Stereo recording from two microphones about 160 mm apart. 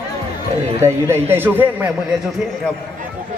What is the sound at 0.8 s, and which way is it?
A woman's voice, 15° right (ahead or behind).